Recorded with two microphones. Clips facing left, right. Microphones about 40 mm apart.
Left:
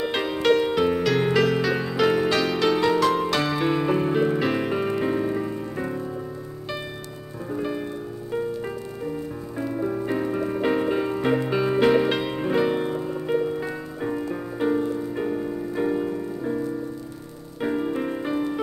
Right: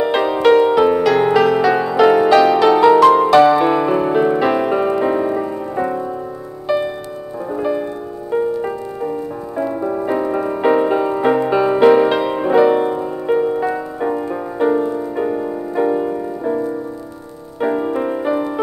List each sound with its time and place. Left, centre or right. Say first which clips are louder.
0.0 s music: right 9 dB; centre
7.5 s music: right 8 dB; centre